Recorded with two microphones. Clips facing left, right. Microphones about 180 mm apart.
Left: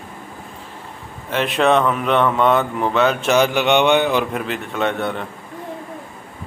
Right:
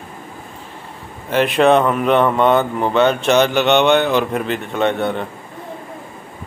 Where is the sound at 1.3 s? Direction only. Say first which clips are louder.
Right 4 dB; centre (ahead or behind).